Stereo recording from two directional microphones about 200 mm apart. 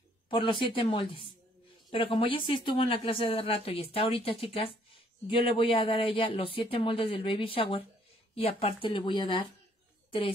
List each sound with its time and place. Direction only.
0.3 s speech: 25° left (ahead or behind)